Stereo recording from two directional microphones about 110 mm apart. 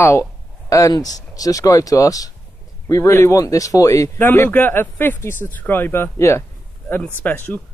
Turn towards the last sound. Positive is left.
turn(degrees=15)  # may be behind; listen again after turning